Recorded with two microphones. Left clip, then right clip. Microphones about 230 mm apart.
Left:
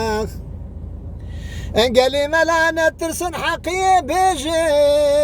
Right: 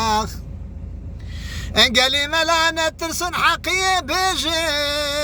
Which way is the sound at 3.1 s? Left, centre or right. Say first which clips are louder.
Right 3 dB; right.